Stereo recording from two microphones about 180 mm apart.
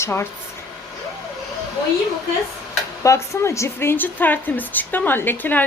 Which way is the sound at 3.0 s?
15° left (ahead or behind).